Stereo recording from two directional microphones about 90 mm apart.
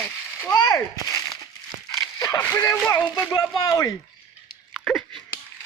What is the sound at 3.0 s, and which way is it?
Speech, 45° left (ahead or behind).